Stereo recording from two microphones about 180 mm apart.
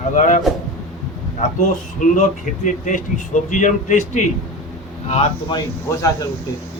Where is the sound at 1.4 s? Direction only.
40° left (ahead or behind).